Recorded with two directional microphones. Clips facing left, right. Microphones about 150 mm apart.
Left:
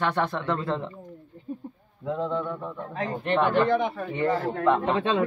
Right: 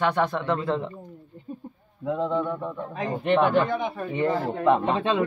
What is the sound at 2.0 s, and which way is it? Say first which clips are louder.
A man's voice: right 3 dB; 10° right (ahead or behind).